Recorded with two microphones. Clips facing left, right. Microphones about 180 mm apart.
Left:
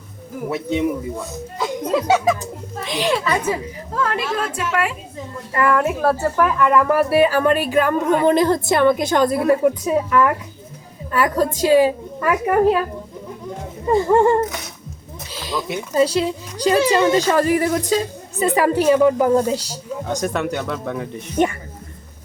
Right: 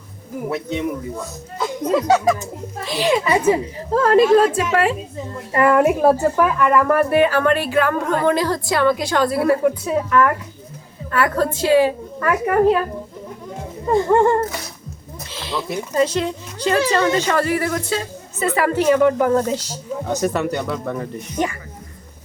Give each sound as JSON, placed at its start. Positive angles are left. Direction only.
{"t": 0.5, "sound": "speech", "side_deg": 15}
{"t": 1.5, "sound": "a woman's voice", "side_deg": 5}
{"t": 3.9, "sound": "a woman's voice", "side_deg": -35}
{"t": 6.3, "sound": "speech", "side_deg": 0}
{"t": 13.8, "sound": "speech", "side_deg": 5}
{"t": 15.3, "sound": "a sound", "side_deg": 10}
{"t": 16.6, "sound": "speech", "side_deg": 10}
{"t": 20.1, "sound": "speech", "side_deg": -5}